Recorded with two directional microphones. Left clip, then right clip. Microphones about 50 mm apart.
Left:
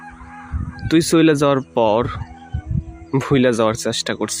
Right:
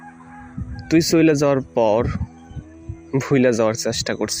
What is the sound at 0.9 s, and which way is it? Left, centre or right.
Speech, right.